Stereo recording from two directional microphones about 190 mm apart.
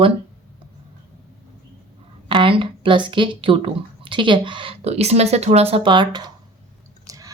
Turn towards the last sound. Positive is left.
turn(degrees=-15)  # may be behind; listen again after turning